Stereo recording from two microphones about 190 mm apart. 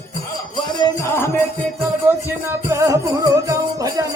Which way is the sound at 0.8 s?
10° left (ahead or behind).